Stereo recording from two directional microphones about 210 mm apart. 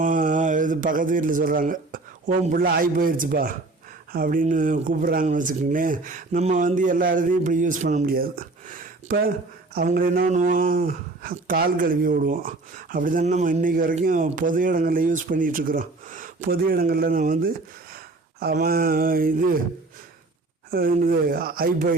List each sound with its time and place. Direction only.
0.0 s speech: 40° right (ahead or behind)
17.9 s a sound: 45° right (ahead or behind)
20.7 s speech: 45° right (ahead or behind)